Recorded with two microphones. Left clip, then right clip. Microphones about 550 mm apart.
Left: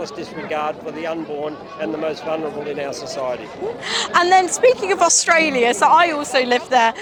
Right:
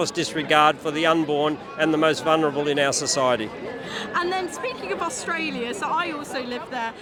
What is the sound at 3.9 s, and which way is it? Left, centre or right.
A woman's voice, left.